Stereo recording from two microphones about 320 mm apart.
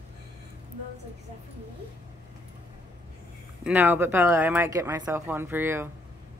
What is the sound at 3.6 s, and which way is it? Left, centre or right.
Speech, centre.